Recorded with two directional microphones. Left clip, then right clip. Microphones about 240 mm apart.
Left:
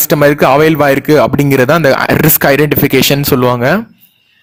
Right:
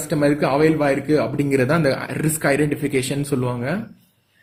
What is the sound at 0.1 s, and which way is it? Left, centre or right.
Speech, left.